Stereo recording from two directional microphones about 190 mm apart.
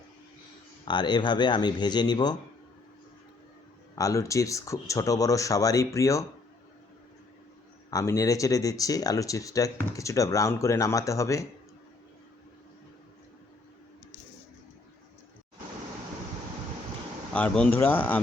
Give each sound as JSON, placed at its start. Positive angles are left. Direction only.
{"t": 0.9, "sound": "speech", "side_deg": 25}
{"t": 3.9, "sound": "speech", "side_deg": 15}
{"t": 7.9, "sound": "speech", "side_deg": 15}
{"t": 17.3, "sound": "speech", "side_deg": 5}